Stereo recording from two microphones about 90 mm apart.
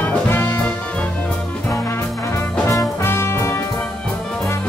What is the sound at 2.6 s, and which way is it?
Music, 30° left (ahead or behind).